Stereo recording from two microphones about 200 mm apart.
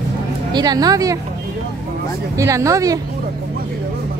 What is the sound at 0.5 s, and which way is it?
Speech, 20° right (ahead or behind).